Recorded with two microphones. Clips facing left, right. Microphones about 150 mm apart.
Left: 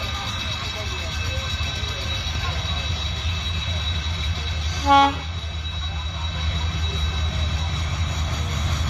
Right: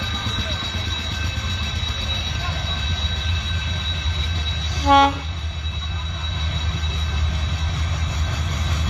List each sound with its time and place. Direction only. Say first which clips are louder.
4.8 s train: right 1 dB; centre (ahead or behind)